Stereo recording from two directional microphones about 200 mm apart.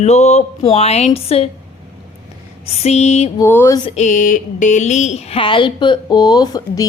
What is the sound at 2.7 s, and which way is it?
Speech, 30° left (ahead or behind).